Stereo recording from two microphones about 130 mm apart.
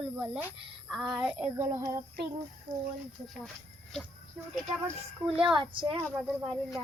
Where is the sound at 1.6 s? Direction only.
25° right (ahead or behind).